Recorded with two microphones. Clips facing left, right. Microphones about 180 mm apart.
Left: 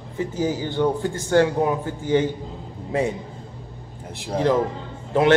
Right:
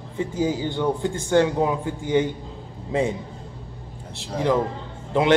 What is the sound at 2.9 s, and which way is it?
Speech, 20° right (ahead or behind).